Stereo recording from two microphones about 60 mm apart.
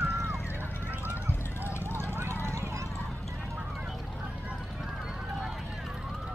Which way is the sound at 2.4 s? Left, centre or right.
Right.